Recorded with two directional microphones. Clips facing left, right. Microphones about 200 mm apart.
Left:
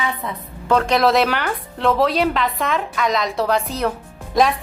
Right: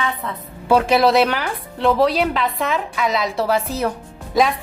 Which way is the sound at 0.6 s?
5° right (ahead or behind).